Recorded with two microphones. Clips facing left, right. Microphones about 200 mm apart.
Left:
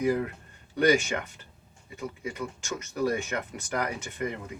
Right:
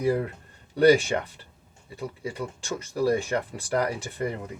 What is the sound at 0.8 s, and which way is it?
Speech, 35° right (ahead or behind).